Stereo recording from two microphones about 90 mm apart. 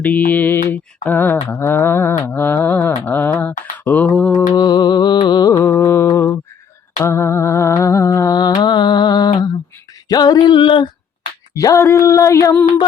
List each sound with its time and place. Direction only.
0.0 s mantra: 20° left (ahead or behind)
4.5 s mantra: 50° left (ahead or behind)
5.5 s music: 30° left (ahead or behind)
5.8 s mantra: 30° left (ahead or behind)
7.0 s music: 30° left (ahead or behind); by 9.5 s 50° left (ahead or behind)
10.1 s a sound: 50° left (ahead or behind)
11.5 s a sound: 35° left (ahead or behind)